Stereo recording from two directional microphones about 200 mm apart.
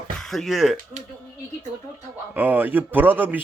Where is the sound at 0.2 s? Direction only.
Centre (ahead or behind).